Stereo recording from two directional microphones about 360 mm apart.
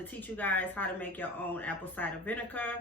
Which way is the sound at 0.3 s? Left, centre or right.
Centre.